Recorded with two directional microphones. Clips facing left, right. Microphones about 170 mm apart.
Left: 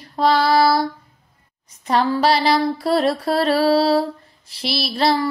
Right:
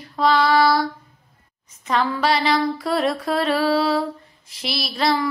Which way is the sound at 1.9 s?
35° left (ahead or behind).